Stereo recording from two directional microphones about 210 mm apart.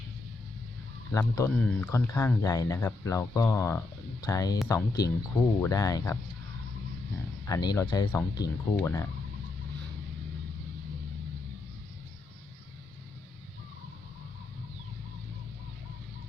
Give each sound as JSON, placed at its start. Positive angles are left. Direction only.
{"t": 1.1, "sound": "speech", "side_deg": 10}
{"t": 7.4, "sound": "speech", "side_deg": 15}